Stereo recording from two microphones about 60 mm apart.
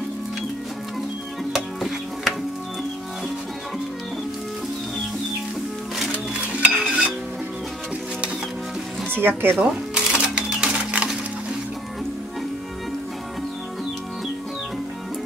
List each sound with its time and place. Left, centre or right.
1.5 s music: centre
6.1 s music: centre
9.4 s speech: right
9.7 s cash register: centre